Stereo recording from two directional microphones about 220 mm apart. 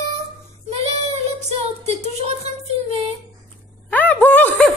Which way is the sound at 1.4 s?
30° right (ahead or behind).